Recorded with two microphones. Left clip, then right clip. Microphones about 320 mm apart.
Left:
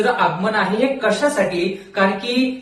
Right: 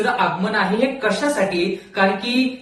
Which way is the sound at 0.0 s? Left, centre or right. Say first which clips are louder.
Left 2 dB; centre.